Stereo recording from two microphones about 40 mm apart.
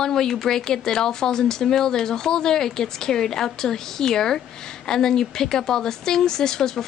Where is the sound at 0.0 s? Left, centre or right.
Centre.